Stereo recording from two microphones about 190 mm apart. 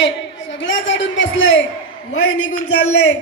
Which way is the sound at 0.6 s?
80° left.